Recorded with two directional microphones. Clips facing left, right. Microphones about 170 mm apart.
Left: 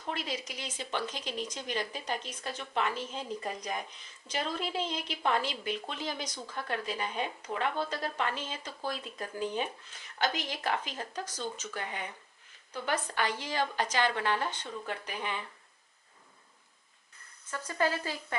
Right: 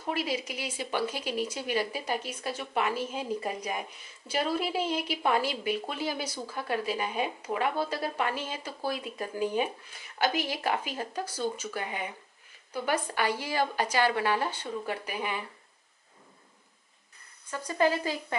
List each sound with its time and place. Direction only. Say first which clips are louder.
0.0 s speech: right 5 dB; 10° right (ahead or behind)
17.5 s speech: right 4 dB; 15° right (ahead or behind)